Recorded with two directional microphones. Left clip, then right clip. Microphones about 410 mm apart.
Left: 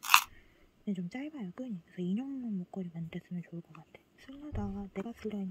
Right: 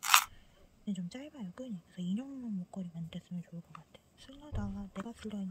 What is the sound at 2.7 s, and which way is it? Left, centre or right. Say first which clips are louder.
Speech: left 3 dB; centre.